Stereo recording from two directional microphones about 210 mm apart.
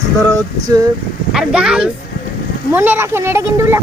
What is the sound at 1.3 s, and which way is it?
Speech, 5° right (ahead or behind).